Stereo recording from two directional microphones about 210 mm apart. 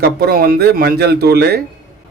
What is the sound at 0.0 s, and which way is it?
A man's voice, 50° right (ahead or behind).